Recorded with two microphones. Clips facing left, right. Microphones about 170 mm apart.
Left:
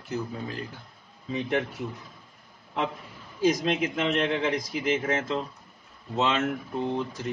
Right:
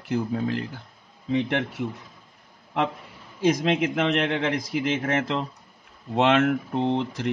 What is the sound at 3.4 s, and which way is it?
Speech, 65° right (ahead or behind).